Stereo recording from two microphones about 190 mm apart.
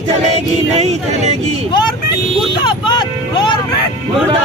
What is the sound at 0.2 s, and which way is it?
Speech, 35° right (ahead or behind).